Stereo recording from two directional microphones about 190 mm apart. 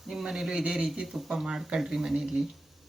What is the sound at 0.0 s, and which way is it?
Speech, centre (ahead or behind).